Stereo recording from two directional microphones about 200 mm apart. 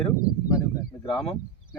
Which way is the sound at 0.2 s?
15° left (ahead or behind).